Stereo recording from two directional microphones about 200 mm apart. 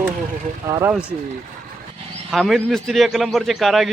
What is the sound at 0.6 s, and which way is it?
Speech, 15° right (ahead or behind).